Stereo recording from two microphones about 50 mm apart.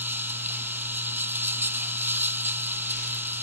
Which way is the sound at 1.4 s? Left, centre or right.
Right.